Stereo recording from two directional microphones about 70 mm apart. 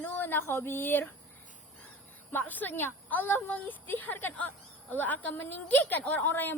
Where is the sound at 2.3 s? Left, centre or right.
Left.